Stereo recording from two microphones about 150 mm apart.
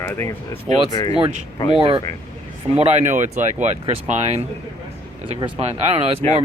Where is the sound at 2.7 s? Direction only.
45° right (ahead or behind).